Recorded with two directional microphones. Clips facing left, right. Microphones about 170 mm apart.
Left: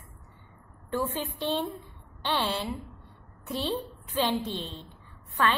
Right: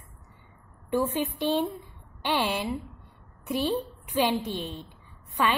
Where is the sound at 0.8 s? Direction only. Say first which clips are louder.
Right 4 dB; 15° right (ahead or behind).